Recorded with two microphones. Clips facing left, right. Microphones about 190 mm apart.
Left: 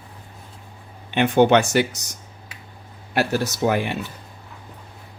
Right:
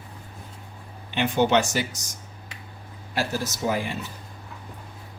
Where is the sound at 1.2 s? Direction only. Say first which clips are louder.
Left 5 dB; 55° left (ahead or behind).